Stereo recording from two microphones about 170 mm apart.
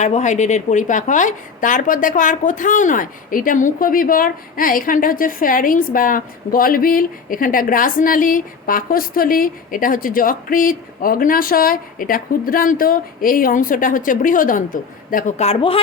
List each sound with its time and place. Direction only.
0.0 s a woman's voice: 45° left (ahead or behind)